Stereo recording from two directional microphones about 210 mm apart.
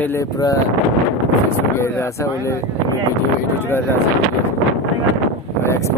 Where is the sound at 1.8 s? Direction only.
15° left (ahead or behind).